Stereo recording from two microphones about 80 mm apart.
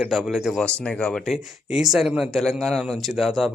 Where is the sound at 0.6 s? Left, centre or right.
Centre.